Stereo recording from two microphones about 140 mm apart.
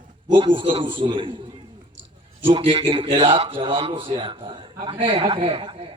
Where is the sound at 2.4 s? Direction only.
40° right (ahead or behind).